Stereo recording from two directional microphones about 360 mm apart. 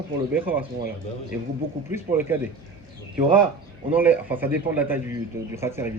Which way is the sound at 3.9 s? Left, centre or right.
Centre.